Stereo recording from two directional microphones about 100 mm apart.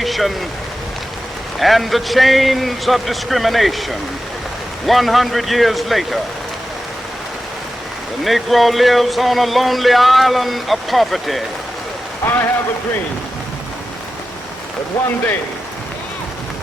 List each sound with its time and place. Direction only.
0.0 s a sound: centre (ahead or behind)
1.5 s speech: centre (ahead or behind)
8.2 s speech: centre (ahead or behind)
12.2 s a man's voice: 20° left (ahead or behind)